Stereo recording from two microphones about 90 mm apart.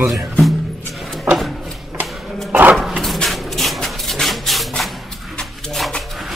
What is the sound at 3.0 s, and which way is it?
Rub, 5° left (ahead or behind).